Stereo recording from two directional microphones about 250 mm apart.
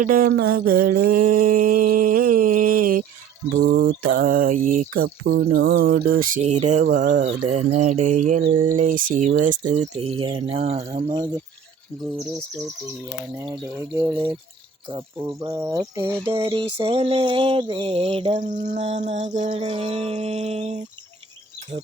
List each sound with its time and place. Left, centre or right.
0.0 s a sound: right
7.0 s speech: right
13.4 s speech: centre; by 20.8 s right